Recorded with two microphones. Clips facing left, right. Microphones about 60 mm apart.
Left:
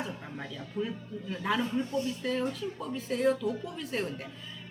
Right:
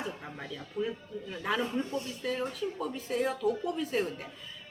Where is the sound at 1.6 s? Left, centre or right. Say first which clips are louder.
Left 1 dB; right.